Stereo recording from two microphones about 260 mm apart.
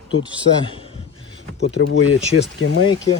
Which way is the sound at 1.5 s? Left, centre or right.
Left.